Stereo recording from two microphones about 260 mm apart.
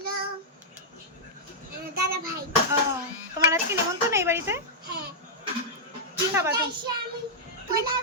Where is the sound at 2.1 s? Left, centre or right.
Right.